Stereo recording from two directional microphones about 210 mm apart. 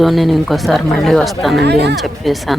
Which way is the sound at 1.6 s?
55° right (ahead or behind).